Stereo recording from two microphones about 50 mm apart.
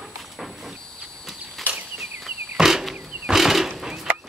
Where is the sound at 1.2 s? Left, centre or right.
Centre.